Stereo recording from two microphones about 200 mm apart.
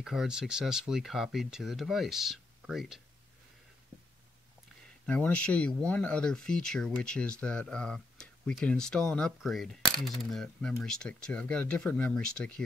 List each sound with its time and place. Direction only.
0.0 s speech: centre (ahead or behind)
5.0 s speech: 5° left (ahead or behind)